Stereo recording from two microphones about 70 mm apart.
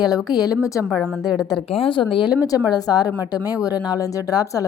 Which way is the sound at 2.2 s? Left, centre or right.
Left.